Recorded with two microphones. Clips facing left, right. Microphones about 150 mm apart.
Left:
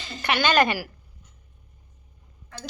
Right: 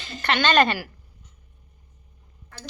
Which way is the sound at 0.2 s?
10° left (ahead or behind).